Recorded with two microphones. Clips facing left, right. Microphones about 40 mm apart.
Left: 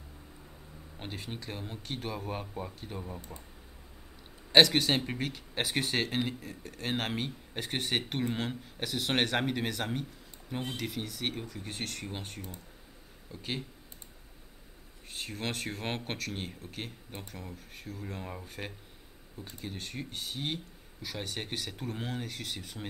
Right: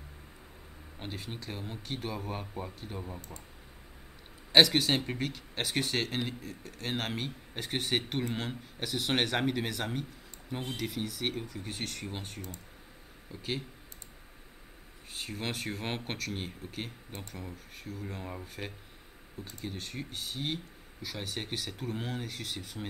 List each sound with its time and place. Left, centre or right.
0.9 s speech: centre
4.5 s speech: centre
15.0 s speech: centre